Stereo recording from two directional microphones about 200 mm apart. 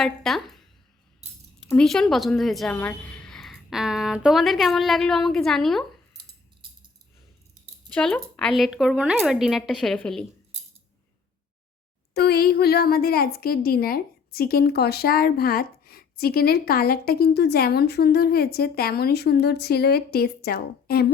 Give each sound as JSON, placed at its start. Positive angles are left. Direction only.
{"t": 0.0, "sound": "a woman's voice", "side_deg": 0}
{"t": 1.6, "sound": "a woman's voice", "side_deg": 0}
{"t": 7.9, "sound": "a woman's voice", "side_deg": 5}
{"t": 12.1, "sound": "a woman's voice", "side_deg": 50}